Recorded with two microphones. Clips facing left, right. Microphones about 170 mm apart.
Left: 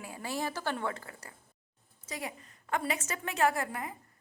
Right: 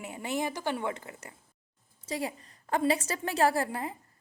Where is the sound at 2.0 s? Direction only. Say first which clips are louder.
Right 6 dB; 30° right (ahead or behind).